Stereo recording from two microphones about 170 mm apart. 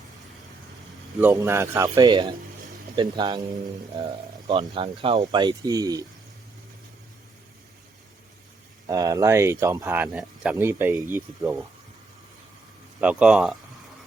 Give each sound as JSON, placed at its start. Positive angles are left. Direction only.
{"t": 1.3, "sound": "speech", "side_deg": -20}
{"t": 8.9, "sound": "speech", "side_deg": -20}
{"t": 13.0, "sound": "speech", "side_deg": -5}